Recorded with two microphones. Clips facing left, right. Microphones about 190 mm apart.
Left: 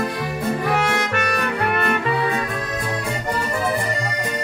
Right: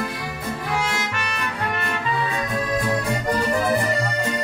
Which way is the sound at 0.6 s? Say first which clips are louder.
Left 2 dB; 60° left (ahead or behind).